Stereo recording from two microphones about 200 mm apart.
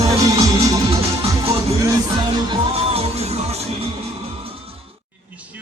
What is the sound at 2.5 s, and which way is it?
Music, 30° right (ahead or behind).